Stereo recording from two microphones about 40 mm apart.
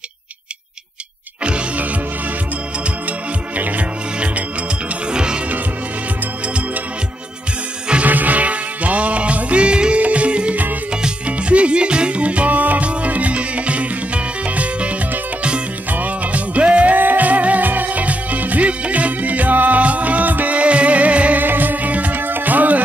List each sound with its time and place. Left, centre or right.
3.1 s music: right
5.1 s music: right
6.4 s music: right
8.0 s music: right
16.9 s music: right
20.5 s music: right
21.4 s music: right
22.2 s music: right